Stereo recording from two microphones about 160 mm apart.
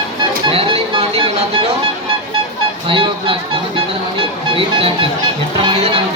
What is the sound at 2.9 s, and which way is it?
Speech, 35° right (ahead or behind).